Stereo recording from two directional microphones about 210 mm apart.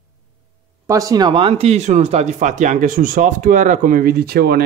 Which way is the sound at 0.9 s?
15° right (ahead or behind).